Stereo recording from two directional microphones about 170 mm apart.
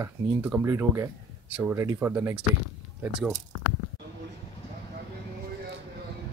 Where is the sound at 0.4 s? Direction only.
10° right (ahead or behind).